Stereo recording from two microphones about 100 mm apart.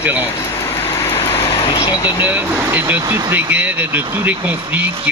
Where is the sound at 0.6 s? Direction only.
25° left (ahead or behind).